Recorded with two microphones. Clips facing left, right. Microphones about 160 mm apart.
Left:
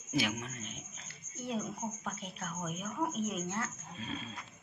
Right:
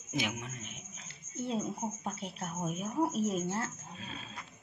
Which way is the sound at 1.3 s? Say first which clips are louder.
Right 3 dB; 25° right (ahead or behind).